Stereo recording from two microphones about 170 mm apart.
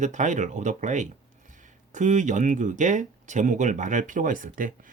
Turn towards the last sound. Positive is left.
turn(degrees=-55)  # may be behind; listen again after turning